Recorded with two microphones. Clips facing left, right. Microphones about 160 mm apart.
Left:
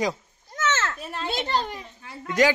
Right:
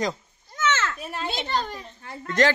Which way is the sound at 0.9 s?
5° right (ahead or behind).